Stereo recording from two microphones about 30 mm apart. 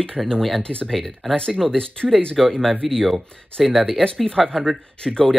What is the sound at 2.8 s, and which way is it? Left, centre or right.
Speech, centre.